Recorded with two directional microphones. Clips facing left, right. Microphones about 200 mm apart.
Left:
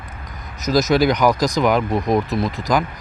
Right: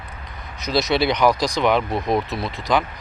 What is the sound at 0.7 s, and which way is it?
Speech, 40° left (ahead or behind).